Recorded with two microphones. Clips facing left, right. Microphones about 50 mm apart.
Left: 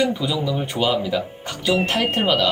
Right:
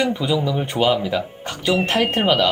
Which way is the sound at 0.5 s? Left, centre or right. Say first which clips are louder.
Right 3 dB; right.